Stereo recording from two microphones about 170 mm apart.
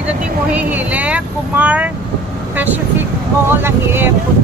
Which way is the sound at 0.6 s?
10° right (ahead or behind).